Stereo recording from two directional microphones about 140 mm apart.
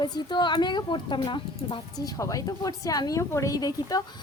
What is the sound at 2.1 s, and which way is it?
A woman's voice, 25° left (ahead or behind).